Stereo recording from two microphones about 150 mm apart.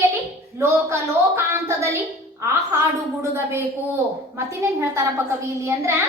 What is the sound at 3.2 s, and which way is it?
A woman's voice, 15° right (ahead or behind).